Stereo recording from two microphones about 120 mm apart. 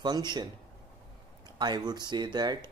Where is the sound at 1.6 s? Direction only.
35° right (ahead or behind).